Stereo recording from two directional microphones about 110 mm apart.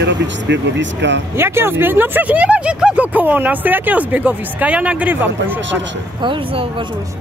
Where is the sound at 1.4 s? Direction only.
20° right (ahead or behind).